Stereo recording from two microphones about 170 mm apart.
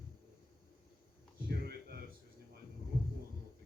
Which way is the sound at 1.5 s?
65° right (ahead or behind).